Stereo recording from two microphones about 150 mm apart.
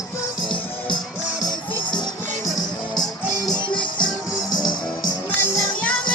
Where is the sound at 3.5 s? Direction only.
30° left (ahead or behind).